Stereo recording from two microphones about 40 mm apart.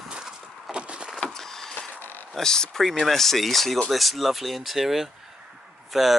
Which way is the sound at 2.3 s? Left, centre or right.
Centre.